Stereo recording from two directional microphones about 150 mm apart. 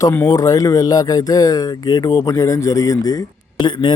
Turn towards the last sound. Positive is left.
turn(degrees=30)  # may be behind; listen again after turning